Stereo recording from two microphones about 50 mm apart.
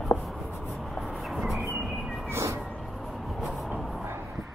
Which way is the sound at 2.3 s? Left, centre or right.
Right.